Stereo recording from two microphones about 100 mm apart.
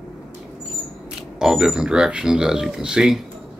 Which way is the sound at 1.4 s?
5° right (ahead or behind).